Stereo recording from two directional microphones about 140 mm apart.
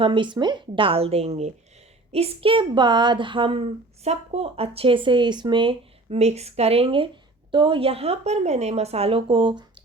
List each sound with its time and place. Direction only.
0.0 s a woman's voice: 35° right (ahead or behind)
4.0 s speech: 50° right (ahead or behind); by 9.8 s 35° right (ahead or behind)